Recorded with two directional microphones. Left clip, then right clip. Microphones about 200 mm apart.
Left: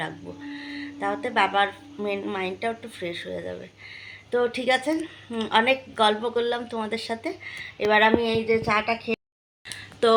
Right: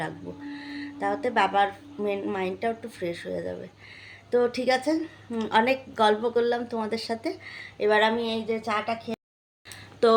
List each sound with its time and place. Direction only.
0.5 s a woman's voice: 10° right (ahead or behind)
8.2 s a woman's voice: 40° left (ahead or behind)
10.0 s a woman's voice: 5° right (ahead or behind)